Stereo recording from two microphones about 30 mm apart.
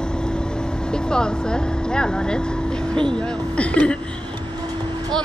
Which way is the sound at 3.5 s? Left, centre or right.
Left.